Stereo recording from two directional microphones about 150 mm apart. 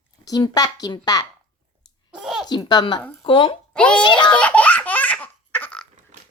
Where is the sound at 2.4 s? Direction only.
30° left (ahead or behind).